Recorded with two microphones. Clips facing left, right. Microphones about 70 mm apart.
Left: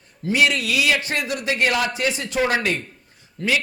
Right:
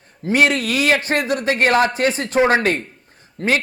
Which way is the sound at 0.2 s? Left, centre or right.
Right.